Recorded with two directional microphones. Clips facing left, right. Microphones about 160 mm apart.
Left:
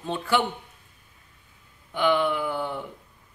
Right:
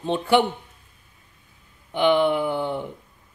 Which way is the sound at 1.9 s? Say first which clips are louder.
Right 4 dB; 25° right (ahead or behind).